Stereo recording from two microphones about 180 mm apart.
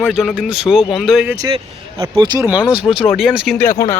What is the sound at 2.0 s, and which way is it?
Speech, 25° right (ahead or behind).